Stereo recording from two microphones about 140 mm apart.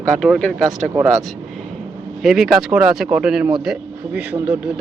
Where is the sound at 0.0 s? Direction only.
5° left (ahead or behind).